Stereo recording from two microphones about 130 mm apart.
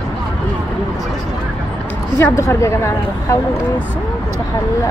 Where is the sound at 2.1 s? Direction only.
20° left (ahead or behind).